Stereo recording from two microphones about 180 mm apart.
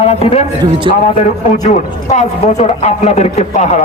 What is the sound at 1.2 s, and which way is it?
A man's voice, 40° left (ahead or behind).